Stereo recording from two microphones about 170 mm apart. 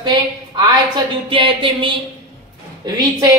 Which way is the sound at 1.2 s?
30° right (ahead or behind).